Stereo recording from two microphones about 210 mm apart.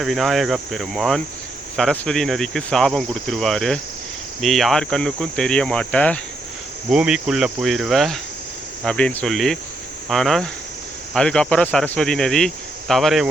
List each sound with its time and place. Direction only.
0.0 s speech: centre (ahead or behind)